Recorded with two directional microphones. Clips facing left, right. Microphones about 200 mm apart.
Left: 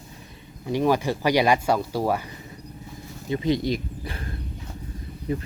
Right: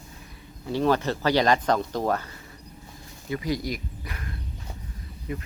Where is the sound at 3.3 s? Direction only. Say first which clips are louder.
Left 5 dB; 25° left (ahead or behind).